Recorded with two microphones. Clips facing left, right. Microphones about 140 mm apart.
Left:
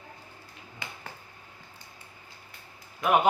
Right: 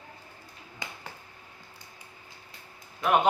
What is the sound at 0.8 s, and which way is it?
Finger snapping, 15° right (ahead or behind).